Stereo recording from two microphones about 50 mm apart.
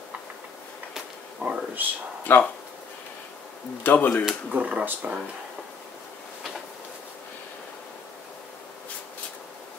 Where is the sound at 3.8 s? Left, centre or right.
Left.